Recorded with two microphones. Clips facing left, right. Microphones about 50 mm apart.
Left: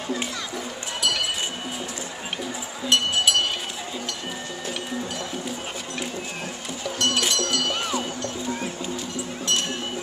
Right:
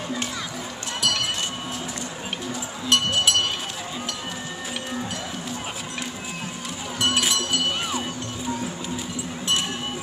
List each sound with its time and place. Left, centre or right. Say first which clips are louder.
2.9 s music: even; centre
7.0 s music: right 1 dB; centre